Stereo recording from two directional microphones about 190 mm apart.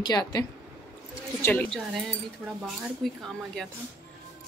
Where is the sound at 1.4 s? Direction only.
10° left (ahead or behind).